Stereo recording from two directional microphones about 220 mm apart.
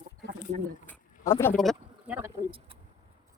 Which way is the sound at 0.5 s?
35° right (ahead or behind).